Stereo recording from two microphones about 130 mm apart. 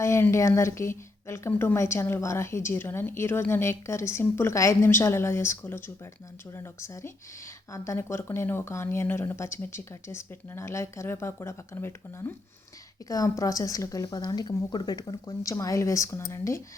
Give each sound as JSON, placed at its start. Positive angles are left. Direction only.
{"t": 0.0, "sound": "speech", "side_deg": 20}